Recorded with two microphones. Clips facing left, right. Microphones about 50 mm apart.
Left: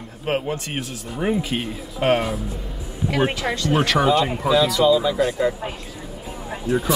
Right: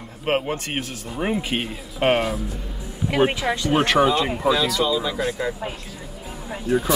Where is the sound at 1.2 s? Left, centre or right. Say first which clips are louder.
Left 1 dB; right.